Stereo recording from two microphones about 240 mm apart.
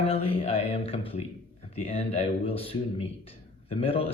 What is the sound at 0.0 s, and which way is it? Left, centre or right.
A man's voice, left.